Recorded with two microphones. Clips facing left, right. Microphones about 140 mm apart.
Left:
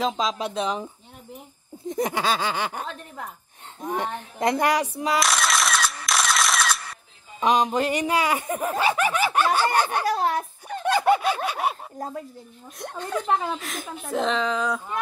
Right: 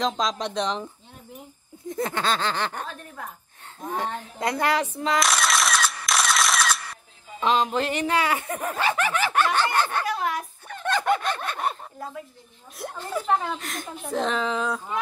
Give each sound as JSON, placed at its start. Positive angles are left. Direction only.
{"t": 0.0, "sound": "a woman's voice", "side_deg": 5}
{"t": 1.9, "sound": "speech", "side_deg": 15}
{"t": 3.8, "sound": "speech", "side_deg": 20}
{"t": 5.2, "sound": "a sound", "side_deg": 0}
{"t": 7.3, "sound": "speech", "side_deg": 15}
{"t": 10.0, "sound": "a sound", "side_deg": 35}
{"t": 10.8, "sound": "a sound", "side_deg": 10}
{"t": 12.0, "sound": "speech", "side_deg": 40}
{"t": 12.7, "sound": "a woman's voice", "side_deg": -5}